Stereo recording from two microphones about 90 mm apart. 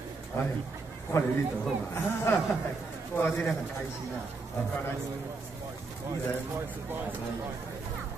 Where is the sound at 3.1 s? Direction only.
20° left (ahead or behind).